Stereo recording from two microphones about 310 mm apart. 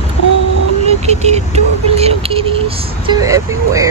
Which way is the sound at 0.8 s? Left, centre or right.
Right.